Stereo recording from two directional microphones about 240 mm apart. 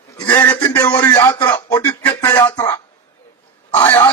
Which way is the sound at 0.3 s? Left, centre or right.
Centre.